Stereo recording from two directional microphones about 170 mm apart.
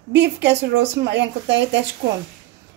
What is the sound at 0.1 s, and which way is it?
A woman's voice, 90° right.